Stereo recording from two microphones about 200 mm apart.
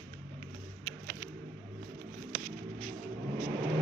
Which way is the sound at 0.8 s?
40° right (ahead or behind).